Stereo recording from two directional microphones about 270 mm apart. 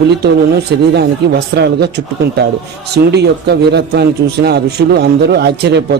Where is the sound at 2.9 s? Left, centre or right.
Right.